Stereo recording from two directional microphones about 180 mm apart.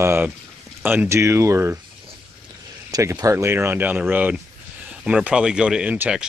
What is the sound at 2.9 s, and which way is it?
Speech, 20° right (ahead or behind).